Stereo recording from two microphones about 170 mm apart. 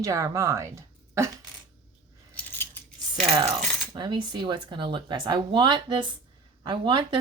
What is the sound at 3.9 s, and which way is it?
Speech, 25° right (ahead or behind).